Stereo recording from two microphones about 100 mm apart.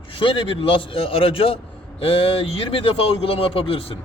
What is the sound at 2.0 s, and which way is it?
Speech, 75° left (ahead or behind).